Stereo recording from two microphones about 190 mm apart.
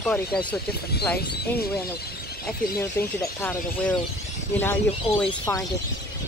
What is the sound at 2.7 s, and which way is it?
Speech, 15° left (ahead or behind).